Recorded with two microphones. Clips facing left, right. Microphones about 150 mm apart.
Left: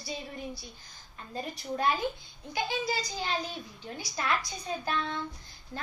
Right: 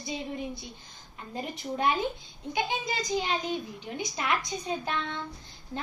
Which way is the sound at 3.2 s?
20° right (ahead or behind).